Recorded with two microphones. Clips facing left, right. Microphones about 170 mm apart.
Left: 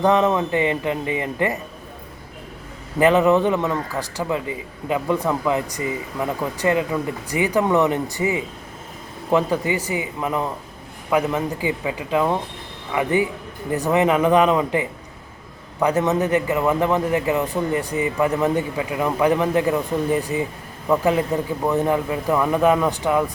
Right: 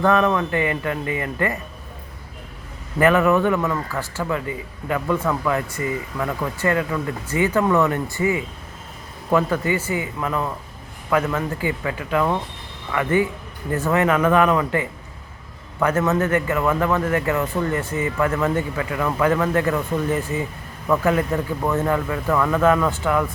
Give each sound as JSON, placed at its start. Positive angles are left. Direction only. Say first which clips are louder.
{"t": 0.0, "sound": "a man's voice", "louder": "left 1 dB", "side_deg": 20}
{"t": 3.0, "sound": "a man's voice", "louder": "left 1 dB", "side_deg": 20}